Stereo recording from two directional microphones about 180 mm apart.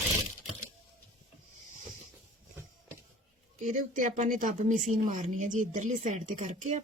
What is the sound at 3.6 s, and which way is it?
Speech, 45° right (ahead or behind).